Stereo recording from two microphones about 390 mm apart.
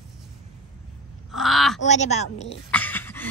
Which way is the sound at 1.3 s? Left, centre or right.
Centre.